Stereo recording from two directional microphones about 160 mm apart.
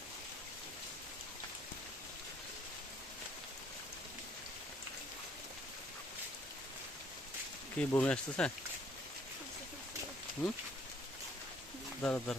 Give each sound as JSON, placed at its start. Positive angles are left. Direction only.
{"t": 7.8, "sound": "speech", "side_deg": 10}
{"t": 12.0, "sound": "speech", "side_deg": 5}